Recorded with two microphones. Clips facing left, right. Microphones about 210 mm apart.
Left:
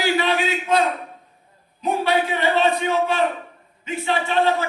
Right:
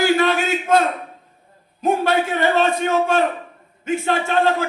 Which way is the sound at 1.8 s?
45° right (ahead or behind).